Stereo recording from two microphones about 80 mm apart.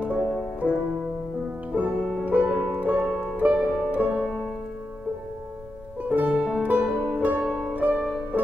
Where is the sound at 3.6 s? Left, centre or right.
Centre.